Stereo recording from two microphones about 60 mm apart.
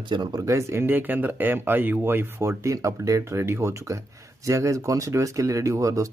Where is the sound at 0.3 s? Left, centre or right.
Right.